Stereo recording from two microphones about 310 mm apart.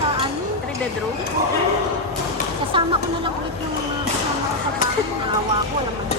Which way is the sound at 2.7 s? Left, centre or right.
Centre.